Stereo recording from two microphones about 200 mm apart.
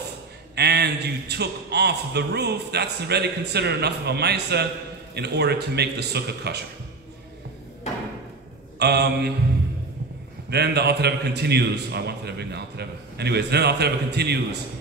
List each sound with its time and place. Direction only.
0.6 s a man's voice: 55° right (ahead or behind)
8.7 s mantra: 55° right (ahead or behind)
10.5 s a man's voice: 55° right (ahead or behind)